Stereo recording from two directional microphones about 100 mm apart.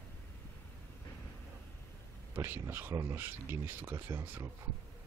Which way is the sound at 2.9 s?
35° right (ahead or behind).